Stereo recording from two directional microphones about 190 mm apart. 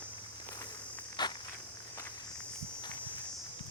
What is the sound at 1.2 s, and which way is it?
Insect, 20° left (ahead or behind).